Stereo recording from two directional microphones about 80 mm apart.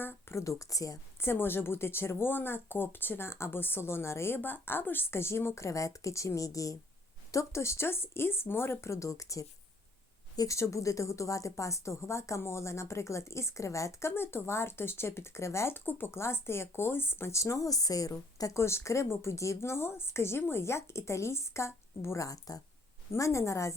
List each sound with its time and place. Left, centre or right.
0.0 s speech: left
1.2 s speech: left